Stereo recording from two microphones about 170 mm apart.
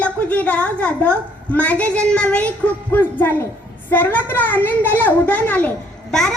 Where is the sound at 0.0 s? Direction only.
10° left (ahead or behind).